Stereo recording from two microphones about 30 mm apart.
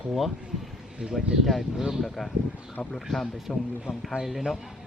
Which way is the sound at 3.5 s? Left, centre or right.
Left.